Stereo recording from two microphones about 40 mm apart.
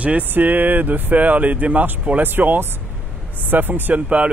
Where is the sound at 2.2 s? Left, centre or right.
Right.